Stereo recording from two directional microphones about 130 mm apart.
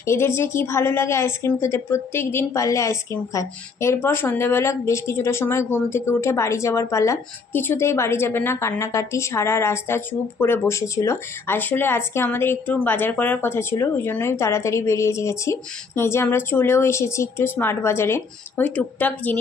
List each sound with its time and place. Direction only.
0.0 s a woman's voice: 20° left (ahead or behind)